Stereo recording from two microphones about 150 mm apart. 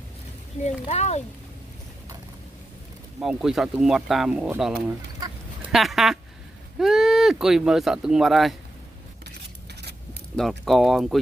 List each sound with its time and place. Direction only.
0.8 s speech: 45° left (ahead or behind)
3.2 s speech: 5° right (ahead or behind)
5.7 s a sound: centre (ahead or behind)
6.8 s speech: centre (ahead or behind)
10.3 s speech: 5° left (ahead or behind)